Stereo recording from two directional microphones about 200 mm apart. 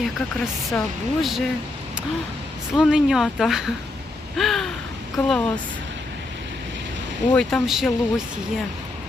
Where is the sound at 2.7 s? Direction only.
Centre (ahead or behind).